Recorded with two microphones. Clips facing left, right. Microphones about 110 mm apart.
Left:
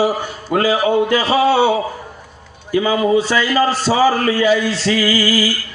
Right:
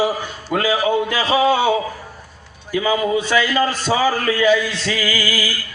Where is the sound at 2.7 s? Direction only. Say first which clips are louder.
Left 4 dB; 30° left (ahead or behind).